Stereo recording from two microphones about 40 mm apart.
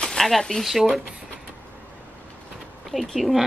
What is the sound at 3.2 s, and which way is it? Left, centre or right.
Speech, centre.